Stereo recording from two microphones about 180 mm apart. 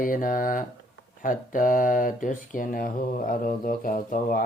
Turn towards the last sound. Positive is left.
turn(degrees=50)  # may be behind; listen again after turning